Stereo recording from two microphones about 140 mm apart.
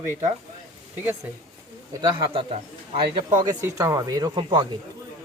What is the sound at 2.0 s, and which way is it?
A man's voice, 40° right (ahead or behind).